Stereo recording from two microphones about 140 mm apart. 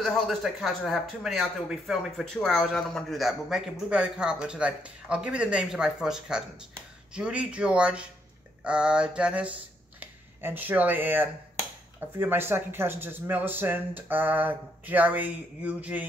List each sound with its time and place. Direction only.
0.0 s a man's voice: centre (ahead or behind)